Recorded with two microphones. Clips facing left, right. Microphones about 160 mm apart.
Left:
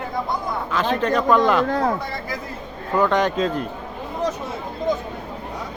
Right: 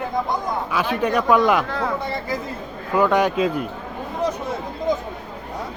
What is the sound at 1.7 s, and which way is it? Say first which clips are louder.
Speech: left 4 dB; 40° left (ahead or behind).